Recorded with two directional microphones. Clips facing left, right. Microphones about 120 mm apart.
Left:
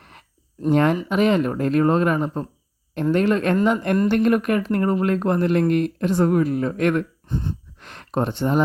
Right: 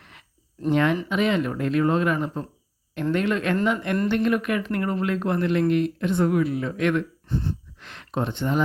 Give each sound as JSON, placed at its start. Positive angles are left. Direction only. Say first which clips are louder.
{"t": 0.7, "sound": "speech", "louder": "left 3 dB", "side_deg": 45}
{"t": 7.3, "sound": "gasp", "louder": "even", "side_deg": 15}
{"t": 7.8, "sound": "speech", "louder": "left 5 dB", "side_deg": 45}